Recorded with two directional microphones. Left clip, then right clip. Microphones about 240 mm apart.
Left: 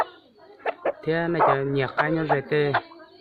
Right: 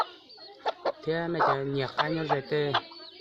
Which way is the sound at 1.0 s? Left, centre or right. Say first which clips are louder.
Left 6 dB; centre.